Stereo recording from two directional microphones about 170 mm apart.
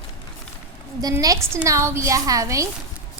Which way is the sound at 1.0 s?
20° right (ahead or behind).